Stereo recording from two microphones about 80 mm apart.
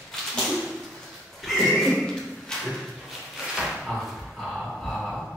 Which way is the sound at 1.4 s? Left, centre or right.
Centre.